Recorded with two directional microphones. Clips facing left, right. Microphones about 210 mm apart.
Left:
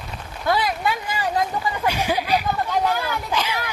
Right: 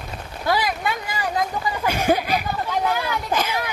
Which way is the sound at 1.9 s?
45° right (ahead or behind).